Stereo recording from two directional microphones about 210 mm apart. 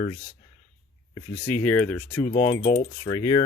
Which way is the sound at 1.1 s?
10° left (ahead or behind).